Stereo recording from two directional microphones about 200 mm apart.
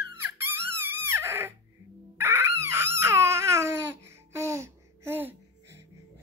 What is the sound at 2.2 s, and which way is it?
Crying, 15° right (ahead or behind).